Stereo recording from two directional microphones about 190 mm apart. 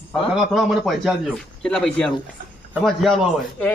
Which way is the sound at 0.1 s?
Centre (ahead or behind).